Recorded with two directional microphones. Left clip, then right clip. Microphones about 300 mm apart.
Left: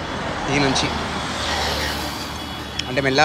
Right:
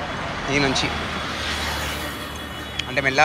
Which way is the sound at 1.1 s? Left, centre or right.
Left.